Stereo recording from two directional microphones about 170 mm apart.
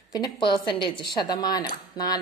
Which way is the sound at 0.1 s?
30° left (ahead or behind).